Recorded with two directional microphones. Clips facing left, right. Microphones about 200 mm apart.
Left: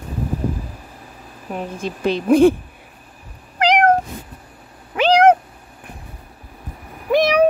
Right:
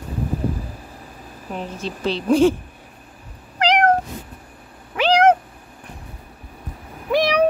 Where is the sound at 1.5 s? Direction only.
10° left (ahead or behind).